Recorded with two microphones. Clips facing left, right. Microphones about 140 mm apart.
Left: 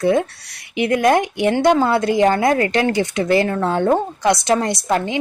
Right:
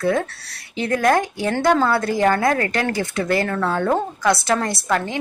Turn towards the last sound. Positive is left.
turn(degrees=20)  # may be behind; listen again after turning